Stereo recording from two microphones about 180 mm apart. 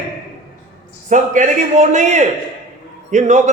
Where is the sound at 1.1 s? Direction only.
45° right (ahead or behind).